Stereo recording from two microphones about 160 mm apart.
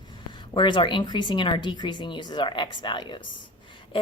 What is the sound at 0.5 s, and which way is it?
Speech, 30° left (ahead or behind).